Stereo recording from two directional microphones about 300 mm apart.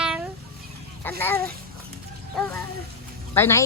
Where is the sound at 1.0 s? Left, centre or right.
Centre.